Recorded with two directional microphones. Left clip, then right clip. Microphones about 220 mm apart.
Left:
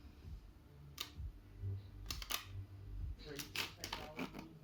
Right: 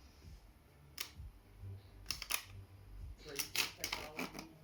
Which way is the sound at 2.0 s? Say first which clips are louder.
Right 3 dB; centre (ahead or behind).